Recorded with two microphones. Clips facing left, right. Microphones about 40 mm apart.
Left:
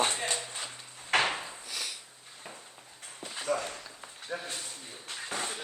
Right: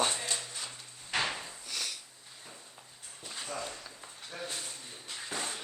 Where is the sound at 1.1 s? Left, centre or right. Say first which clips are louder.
Left 6 dB; left.